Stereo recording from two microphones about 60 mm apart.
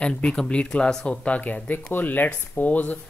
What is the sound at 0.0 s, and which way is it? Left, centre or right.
Speech, centre.